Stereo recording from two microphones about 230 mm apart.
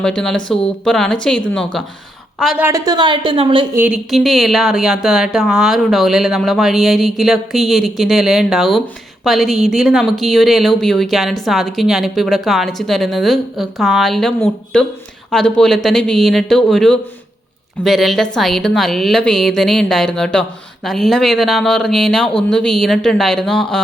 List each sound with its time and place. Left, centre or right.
0.0 s a woman's voice: centre
2.6 s a woman's voice: centre
3.8 s a woman's voice: centre